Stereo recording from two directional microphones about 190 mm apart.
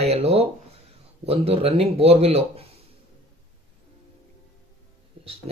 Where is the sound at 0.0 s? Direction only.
35° right (ahead or behind).